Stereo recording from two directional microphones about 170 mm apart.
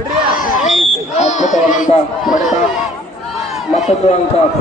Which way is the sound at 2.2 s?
Centre (ahead or behind).